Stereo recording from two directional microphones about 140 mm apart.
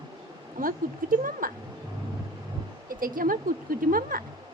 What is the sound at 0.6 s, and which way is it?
Speech, 80° right.